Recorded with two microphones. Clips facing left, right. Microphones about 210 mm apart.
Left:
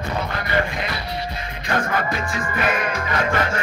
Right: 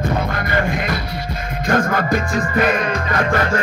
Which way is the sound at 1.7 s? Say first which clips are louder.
Right 6 dB; 45° right (ahead or behind).